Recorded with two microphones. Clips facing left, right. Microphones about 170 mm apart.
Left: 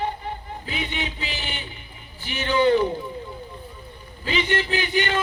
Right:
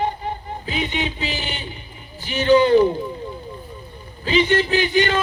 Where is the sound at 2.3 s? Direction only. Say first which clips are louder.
Right 6 dB; 40° right (ahead or behind).